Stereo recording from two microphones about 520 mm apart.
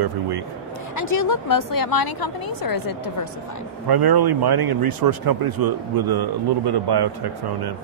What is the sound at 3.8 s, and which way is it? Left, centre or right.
Speech, right.